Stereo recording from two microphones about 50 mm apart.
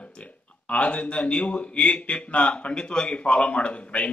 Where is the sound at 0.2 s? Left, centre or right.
Left.